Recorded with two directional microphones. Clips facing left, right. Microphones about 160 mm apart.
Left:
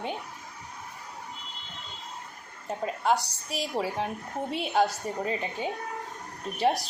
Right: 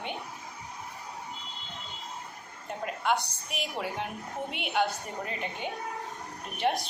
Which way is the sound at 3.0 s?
35° left (ahead or behind).